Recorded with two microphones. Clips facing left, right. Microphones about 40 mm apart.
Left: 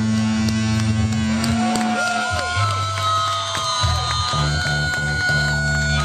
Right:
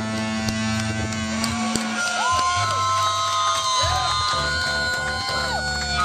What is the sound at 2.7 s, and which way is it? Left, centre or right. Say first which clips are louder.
Music: even; left.